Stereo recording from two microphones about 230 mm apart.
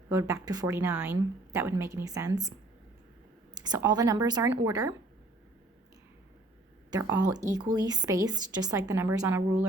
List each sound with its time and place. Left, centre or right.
0.1 s speech: centre
3.5 s speech: centre
6.9 s speech: centre